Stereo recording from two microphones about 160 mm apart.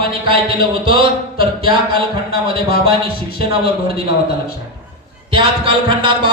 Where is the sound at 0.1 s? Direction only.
35° right (ahead or behind).